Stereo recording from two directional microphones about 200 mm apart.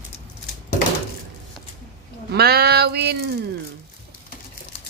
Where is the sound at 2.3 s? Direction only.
50° right (ahead or behind).